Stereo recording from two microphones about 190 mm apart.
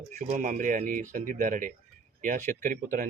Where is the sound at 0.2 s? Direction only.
40° right (ahead or behind).